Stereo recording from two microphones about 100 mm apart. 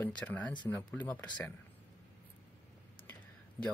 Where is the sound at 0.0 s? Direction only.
15° left (ahead or behind).